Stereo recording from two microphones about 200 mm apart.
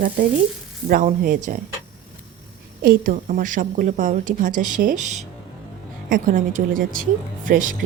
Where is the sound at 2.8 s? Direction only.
45° right (ahead or behind).